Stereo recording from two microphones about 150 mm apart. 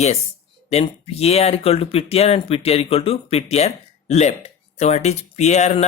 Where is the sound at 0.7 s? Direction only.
45° left (ahead or behind).